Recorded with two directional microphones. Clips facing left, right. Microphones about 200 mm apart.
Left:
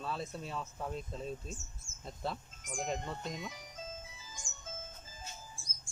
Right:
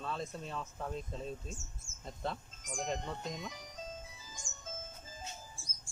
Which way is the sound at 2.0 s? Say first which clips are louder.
Even; 5° left (ahead or behind).